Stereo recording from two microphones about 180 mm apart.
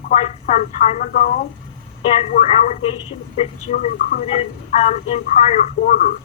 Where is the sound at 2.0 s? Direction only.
35° left (ahead or behind).